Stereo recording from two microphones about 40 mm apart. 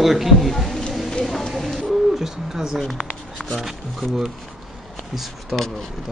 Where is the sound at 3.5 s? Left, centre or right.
Centre.